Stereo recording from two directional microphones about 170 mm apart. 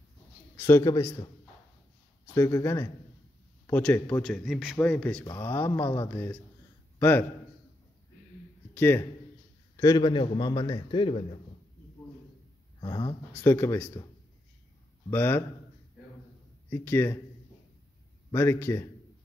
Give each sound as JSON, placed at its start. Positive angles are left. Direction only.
{"t": 0.6, "sound": "speech", "side_deg": 15}
{"t": 2.3, "sound": "a man's voice", "side_deg": 15}
{"t": 8.7, "sound": "a man's voice", "side_deg": 10}
{"t": 9.8, "sound": "a man's voice", "side_deg": 25}
{"t": 12.8, "sound": "speech", "side_deg": 25}
{"t": 13.3, "sound": "speech", "side_deg": 15}
{"t": 15.0, "sound": "speech", "side_deg": 15}
{"t": 16.7, "sound": "speech", "side_deg": 15}
{"t": 18.3, "sound": "speech", "side_deg": 15}